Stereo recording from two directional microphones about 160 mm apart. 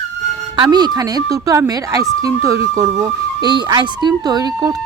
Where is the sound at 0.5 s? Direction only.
25° right (ahead or behind).